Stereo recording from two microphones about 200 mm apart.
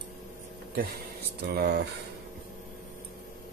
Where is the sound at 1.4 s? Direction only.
55° right (ahead or behind).